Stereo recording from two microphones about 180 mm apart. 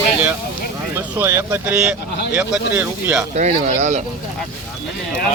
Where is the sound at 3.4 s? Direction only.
40° right (ahead or behind).